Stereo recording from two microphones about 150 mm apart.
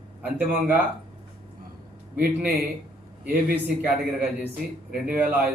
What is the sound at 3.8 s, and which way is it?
A man's voice, 10° right (ahead or behind).